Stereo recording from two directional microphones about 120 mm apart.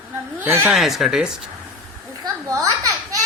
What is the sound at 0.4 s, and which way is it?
Speech, 15° right (ahead or behind).